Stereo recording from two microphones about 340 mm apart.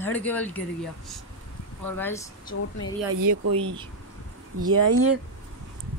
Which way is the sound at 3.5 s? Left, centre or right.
Centre.